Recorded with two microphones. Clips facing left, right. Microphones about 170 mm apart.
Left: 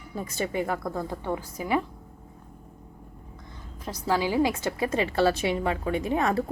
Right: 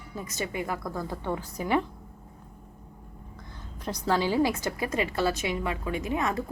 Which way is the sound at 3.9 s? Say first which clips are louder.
Even; 10° left (ahead or behind).